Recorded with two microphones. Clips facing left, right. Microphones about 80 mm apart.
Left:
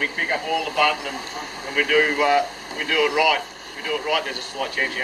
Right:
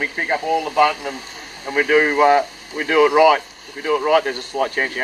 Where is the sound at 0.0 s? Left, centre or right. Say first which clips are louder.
Right 3 dB; centre.